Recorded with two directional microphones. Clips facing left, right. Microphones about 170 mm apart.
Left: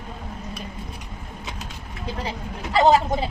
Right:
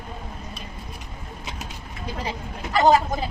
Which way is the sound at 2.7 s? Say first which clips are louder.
Left 1 dB; 25° left (ahead or behind).